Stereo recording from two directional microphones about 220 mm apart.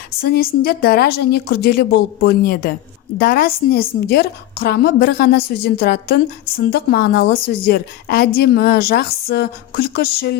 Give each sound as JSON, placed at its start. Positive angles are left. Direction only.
{"t": 0.2, "sound": "a woman's voice", "side_deg": 45}